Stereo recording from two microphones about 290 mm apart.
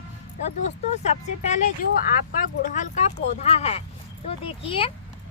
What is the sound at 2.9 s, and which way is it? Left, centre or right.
Speech, left.